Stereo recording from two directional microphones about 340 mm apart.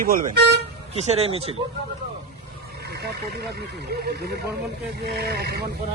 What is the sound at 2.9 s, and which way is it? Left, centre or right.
Speech, right.